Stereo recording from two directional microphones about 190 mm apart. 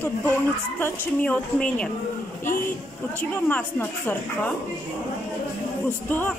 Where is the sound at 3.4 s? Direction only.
10° left (ahead or behind).